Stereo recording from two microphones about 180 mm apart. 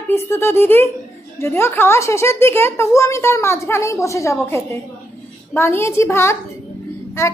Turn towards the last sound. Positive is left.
turn(degrees=15)  # may be behind; listen again after turning